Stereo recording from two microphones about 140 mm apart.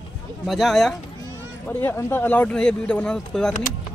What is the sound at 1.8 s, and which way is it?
Speech, 15° left (ahead or behind).